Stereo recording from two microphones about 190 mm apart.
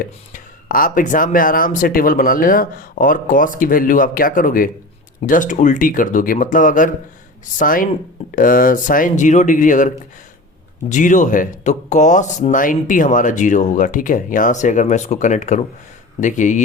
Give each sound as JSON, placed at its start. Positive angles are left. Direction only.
{"t": 0.0, "sound": "speech", "side_deg": 45}